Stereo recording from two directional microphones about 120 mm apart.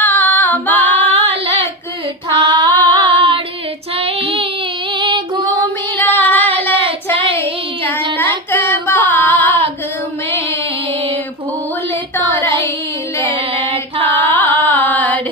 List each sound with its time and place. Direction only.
0.0 s female singing: 15° left (ahead or behind)
1.1 s child singing: 55° right (ahead or behind)
2.4 s female singing: 40° right (ahead or behind)
5.5 s child singing: 15° left (ahead or behind)
8.5 s a sound: 15° left (ahead or behind)
9.1 s female singing: 15° left (ahead or behind)
12.4 s child singing: 20° left (ahead or behind)
13.2 s music: 45° right (ahead or behind)
14.3 s carnatic music: 15° left (ahead or behind)